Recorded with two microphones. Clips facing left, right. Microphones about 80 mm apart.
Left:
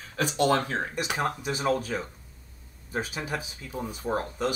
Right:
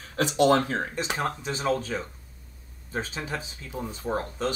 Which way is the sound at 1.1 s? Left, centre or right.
Centre.